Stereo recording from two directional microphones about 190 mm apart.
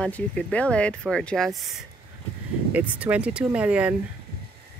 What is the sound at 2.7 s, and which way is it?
Speech, 10° right (ahead or behind).